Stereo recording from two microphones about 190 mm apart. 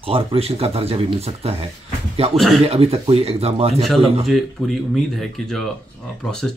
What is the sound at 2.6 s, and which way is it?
Speech, 30° right (ahead or behind).